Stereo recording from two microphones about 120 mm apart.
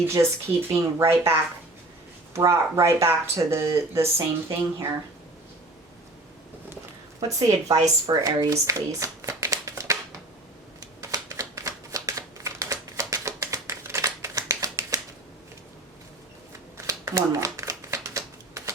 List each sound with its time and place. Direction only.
0.1 s speech: 20° right (ahead or behind)
7.2 s speech: 30° right (ahead or behind)
10.8 s shuffling cards: 30° right (ahead or behind)
16.7 s shuffling cards: 25° right (ahead or behind)